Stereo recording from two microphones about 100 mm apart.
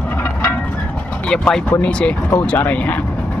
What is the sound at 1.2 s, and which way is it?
Speech, 10° left (ahead or behind).